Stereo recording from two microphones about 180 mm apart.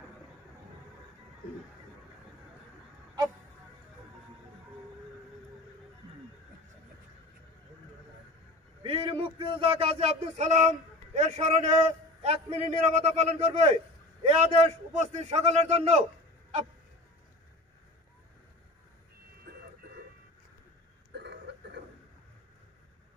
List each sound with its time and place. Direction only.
8.8 s music: 30° right (ahead or behind)
11.1 s a man's voice: 40° right (ahead or behind)
21.1 s a sound: 70° right (ahead or behind)